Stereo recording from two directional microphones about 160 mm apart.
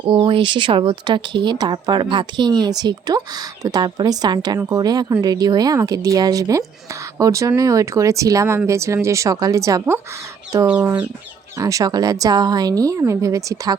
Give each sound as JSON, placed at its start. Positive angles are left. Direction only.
{"t": 0.0, "sound": "speech", "side_deg": -30}
{"t": 11.5, "sound": "speech", "side_deg": -20}